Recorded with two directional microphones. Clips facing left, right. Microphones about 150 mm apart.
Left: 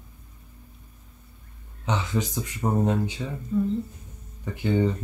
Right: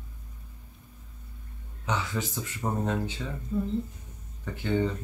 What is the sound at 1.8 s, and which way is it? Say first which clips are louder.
Speech: left 4 dB; 20° left (ahead or behind).